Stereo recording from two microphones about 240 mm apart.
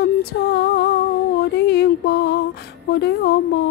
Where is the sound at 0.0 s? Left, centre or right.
Left.